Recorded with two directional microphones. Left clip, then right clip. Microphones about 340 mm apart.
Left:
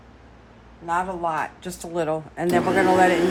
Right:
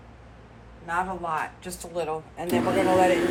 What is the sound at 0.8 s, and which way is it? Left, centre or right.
A man's voice, centre.